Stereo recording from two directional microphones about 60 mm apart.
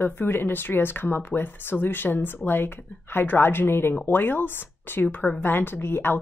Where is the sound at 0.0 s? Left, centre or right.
Left.